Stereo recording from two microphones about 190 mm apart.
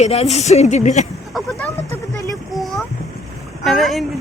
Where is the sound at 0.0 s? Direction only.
35° left (ahead or behind).